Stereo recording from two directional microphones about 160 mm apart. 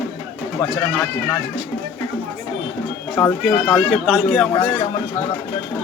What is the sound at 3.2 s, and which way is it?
A man's voice, 5° left (ahead or behind).